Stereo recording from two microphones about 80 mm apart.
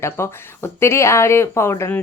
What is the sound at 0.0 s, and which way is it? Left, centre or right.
A woman's voice, left.